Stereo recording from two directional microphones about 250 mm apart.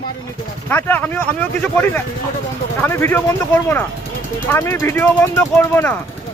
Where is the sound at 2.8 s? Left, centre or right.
Centre.